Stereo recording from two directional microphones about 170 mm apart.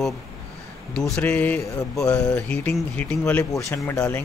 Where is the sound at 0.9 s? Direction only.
5° left (ahead or behind).